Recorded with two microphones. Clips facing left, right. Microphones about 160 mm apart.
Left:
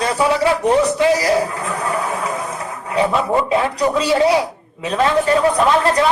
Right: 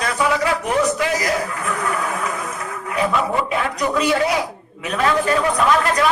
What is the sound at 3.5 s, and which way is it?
A man's voice, 30° left (ahead or behind).